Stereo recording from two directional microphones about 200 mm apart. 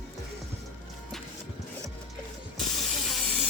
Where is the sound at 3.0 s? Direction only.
Centre (ahead or behind).